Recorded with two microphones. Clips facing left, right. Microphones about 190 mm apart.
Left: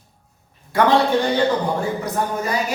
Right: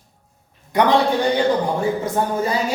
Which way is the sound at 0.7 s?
20° right (ahead or behind).